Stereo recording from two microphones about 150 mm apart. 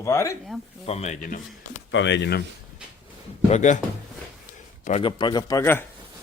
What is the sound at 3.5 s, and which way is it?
Speech, 55° left (ahead or behind).